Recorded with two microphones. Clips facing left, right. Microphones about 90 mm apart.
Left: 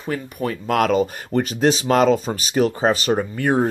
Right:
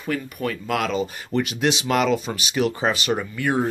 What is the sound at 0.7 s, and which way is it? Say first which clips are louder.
Speech: left 9 dB; 45° left (ahead or behind).